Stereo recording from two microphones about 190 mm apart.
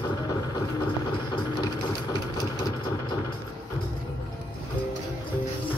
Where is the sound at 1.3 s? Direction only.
20° left (ahead or behind).